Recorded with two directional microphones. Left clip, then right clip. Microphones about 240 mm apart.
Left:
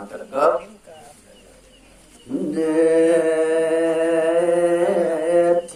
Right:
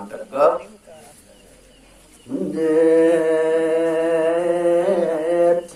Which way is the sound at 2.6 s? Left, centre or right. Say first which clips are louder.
Right 2 dB; right.